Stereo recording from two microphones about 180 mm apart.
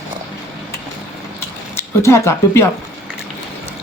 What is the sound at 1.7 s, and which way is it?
Speech, 15° left (ahead or behind).